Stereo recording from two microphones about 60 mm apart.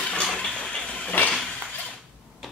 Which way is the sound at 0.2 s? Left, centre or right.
Centre.